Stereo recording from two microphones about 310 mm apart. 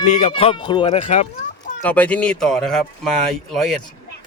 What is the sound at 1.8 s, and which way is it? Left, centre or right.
Speech, centre.